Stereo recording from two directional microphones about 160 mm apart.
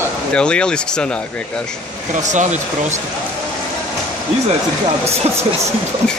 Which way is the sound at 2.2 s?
50° right (ahead or behind).